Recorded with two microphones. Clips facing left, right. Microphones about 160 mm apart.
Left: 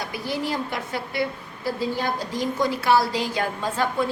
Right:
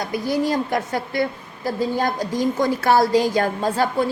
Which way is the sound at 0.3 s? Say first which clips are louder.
Right 6 dB; 45° right (ahead or behind).